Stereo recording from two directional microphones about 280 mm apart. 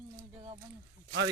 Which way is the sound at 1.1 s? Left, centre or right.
Right.